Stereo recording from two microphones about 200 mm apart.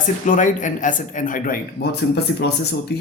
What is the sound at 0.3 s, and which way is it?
Speech, 40° left (ahead or behind).